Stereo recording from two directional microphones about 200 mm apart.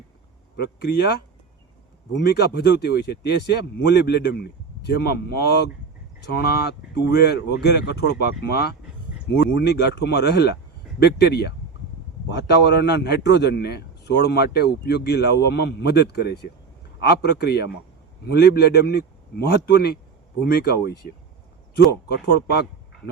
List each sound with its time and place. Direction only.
0.5 s a man's voice: 55° left (ahead or behind)
22.1 s a man's voice: 55° left (ahead or behind)